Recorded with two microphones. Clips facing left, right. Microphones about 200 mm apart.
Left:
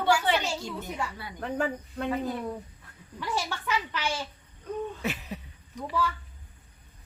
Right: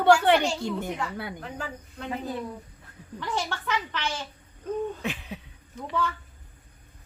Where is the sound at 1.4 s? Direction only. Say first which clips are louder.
Left 7 dB; 55° left (ahead or behind).